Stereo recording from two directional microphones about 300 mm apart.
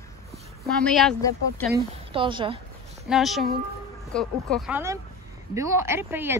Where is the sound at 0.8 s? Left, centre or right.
Centre.